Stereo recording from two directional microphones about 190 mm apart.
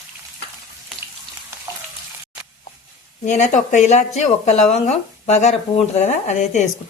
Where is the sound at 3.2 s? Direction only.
40° left (ahead or behind).